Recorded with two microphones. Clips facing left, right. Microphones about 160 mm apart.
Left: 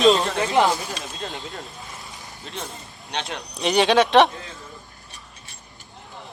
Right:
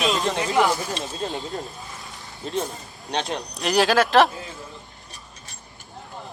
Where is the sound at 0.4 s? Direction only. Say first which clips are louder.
Left 2 dB; 20° left (ahead or behind).